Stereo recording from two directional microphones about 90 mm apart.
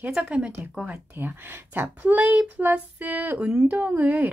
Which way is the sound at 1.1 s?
25° right (ahead or behind).